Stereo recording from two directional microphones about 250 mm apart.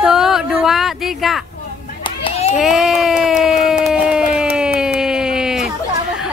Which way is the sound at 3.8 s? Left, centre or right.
Centre.